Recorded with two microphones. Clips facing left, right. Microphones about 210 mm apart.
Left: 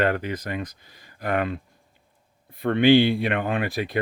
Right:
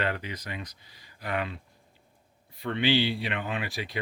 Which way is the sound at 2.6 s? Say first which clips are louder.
Left 9 dB; 55° left (ahead or behind).